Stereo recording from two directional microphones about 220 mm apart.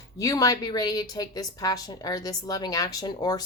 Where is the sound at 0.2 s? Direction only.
15° left (ahead or behind).